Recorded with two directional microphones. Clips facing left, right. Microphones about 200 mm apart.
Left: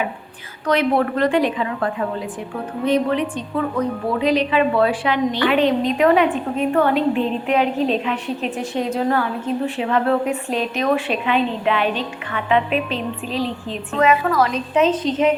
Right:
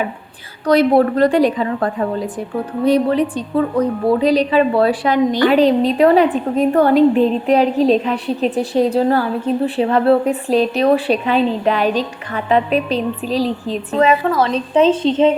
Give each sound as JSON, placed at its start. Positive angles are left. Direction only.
{"t": 0.7, "sound": "a woman's voice", "side_deg": -35}